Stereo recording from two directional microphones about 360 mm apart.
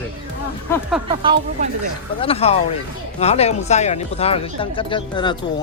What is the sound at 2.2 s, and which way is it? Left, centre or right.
Speech, centre.